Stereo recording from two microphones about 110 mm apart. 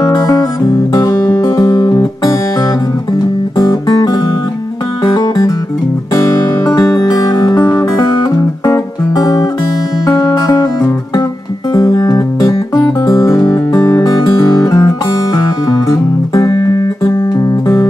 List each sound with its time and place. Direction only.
0.0 s music: 30° left (ahead or behind)
3.5 s music: 35° left (ahead or behind)